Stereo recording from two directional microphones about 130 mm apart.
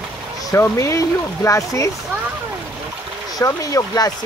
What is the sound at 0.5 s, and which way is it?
Speech, 20° left (ahead or behind).